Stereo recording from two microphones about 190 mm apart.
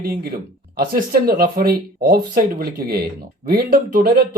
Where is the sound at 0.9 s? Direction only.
50° right (ahead or behind).